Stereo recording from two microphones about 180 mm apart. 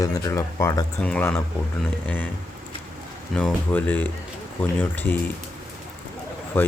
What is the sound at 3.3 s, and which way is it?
Speech, 5° left (ahead or behind).